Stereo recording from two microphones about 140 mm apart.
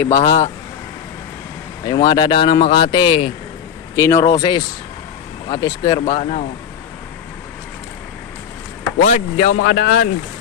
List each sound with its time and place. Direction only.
0.0 s speech: 25° left (ahead or behind)
1.9 s speech: 30° left (ahead or behind)
3.9 s speech: 25° left (ahead or behind)
6.1 s speech: 55° left (ahead or behind)
9.0 s speech: 65° left (ahead or behind); by 10.1 s 90° left